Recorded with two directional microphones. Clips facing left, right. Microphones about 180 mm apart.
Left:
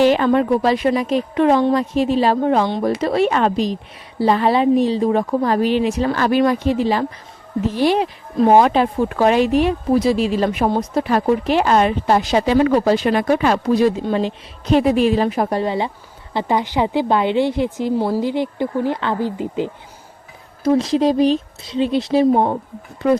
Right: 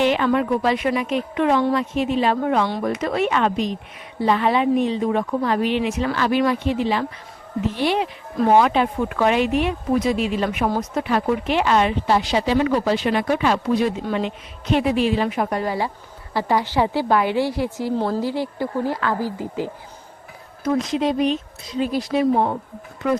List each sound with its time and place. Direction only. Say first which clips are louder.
0.0 s a woman's voice: left 4 dB; 35° left (ahead or behind); by 19.7 s 20° left (ahead or behind)
20.7 s speech: left 5 dB; 30° left (ahead or behind)